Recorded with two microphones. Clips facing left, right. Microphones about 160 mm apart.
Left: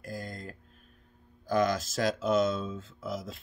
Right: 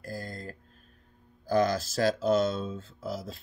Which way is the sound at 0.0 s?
35° right (ahead or behind).